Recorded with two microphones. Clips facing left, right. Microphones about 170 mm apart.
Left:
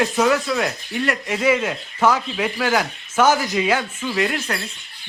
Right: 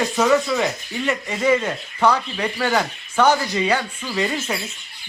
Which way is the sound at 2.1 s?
90° left.